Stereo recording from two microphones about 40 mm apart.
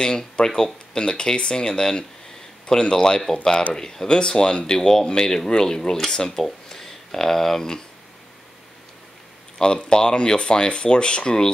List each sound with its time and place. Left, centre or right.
0.0 s speech: centre
9.6 s speech: left